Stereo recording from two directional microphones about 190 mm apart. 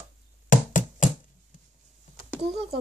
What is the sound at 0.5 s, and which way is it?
Knock, 45° left (ahead or behind).